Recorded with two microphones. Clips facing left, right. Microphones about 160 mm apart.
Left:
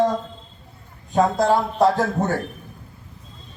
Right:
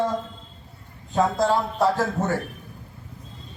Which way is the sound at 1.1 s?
15° left (ahead or behind).